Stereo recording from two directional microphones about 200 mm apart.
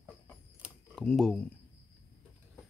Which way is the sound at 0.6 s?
Centre (ahead or behind).